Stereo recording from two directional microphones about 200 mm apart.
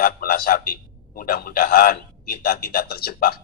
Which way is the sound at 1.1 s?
45° left (ahead or behind).